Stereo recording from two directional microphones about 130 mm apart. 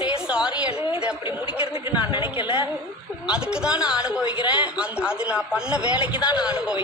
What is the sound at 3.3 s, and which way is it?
A man's voice, 5° right (ahead or behind).